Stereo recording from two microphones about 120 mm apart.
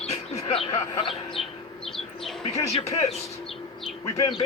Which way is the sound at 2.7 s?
60° left (ahead or behind).